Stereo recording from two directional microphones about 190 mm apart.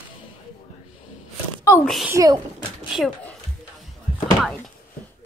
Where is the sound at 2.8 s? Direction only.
Centre (ahead or behind).